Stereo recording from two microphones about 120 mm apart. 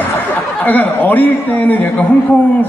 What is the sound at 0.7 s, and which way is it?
A man's voice, 15° left (ahead or behind).